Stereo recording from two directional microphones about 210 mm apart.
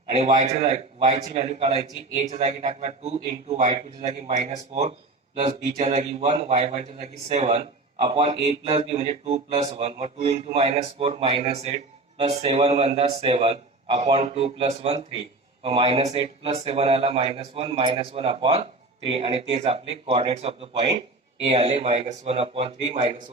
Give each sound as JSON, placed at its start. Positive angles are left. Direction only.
{"t": 0.1, "sound": "a man's voice", "side_deg": -30}